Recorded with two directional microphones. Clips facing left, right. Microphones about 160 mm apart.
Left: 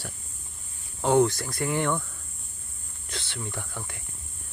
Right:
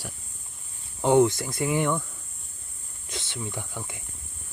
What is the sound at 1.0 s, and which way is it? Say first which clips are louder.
Speech: right 2 dB; 15° right (ahead or behind).